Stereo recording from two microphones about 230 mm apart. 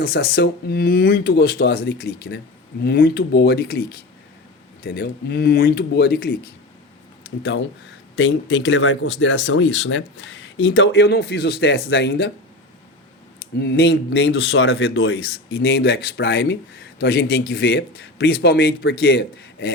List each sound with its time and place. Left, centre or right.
0.0 s speech: left
13.6 s speech: left